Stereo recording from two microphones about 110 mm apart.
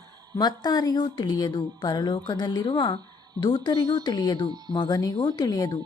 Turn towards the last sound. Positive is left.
turn(degrees=35)  # may be behind; listen again after turning